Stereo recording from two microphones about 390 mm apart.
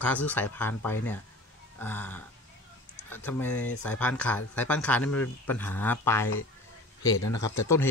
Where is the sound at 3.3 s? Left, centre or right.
Centre.